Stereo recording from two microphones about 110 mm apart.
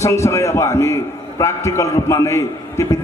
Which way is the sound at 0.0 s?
25° left (ahead or behind).